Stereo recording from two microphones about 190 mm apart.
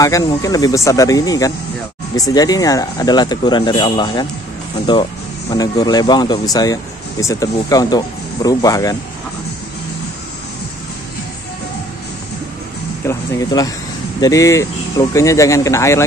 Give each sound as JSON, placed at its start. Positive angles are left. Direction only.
{"t": 0.0, "sound": "speech", "side_deg": 20}
{"t": 13.0, "sound": "speech", "side_deg": 15}